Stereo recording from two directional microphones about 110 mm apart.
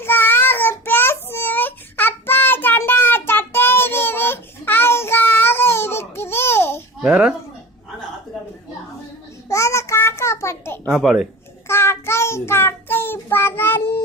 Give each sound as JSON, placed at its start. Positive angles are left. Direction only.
{"t": 0.0, "sound": "child singing", "side_deg": 20}
{"t": 7.0, "sound": "speech", "side_deg": -10}
{"t": 9.5, "sound": "child singing", "side_deg": 25}
{"t": 10.8, "sound": "speech", "side_deg": -5}
{"t": 11.7, "sound": "child singing", "side_deg": 25}